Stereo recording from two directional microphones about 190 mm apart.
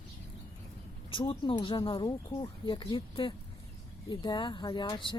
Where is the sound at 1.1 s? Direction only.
25° left (ahead or behind).